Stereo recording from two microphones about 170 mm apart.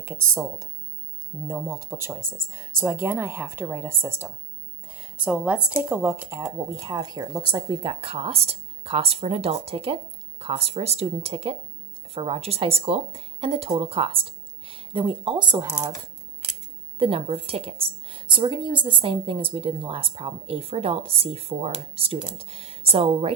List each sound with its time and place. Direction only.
0.0 s a woman's voice: 15° right (ahead or behind)
17.0 s a woman's voice: 35° right (ahead or behind)